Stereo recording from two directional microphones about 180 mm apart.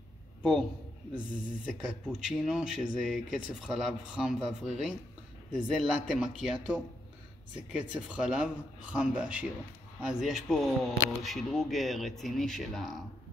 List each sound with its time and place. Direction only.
0.4 s a man's voice: centre (ahead or behind)
1.7 s speech: 5° right (ahead or behind)